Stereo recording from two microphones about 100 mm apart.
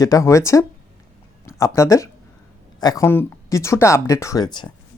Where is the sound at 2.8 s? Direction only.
40° left (ahead or behind).